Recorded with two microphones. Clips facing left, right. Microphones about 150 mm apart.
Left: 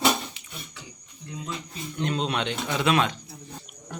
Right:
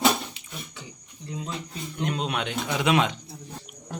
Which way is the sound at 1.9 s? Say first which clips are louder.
Left 1 dB; 10° right (ahead or behind).